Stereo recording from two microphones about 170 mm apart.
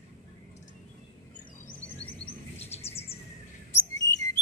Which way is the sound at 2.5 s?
40° left (ahead or behind).